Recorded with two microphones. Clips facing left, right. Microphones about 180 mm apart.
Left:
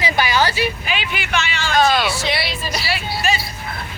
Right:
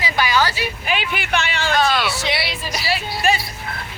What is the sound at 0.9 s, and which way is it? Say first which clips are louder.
Speech: right 2 dB; 55° right (ahead or behind).